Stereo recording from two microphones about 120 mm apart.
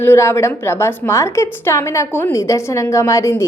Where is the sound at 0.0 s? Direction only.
20° left (ahead or behind).